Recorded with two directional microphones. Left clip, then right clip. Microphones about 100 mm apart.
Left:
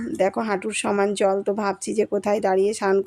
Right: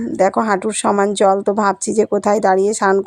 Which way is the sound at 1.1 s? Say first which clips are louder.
Right 7 dB; 45° right (ahead or behind).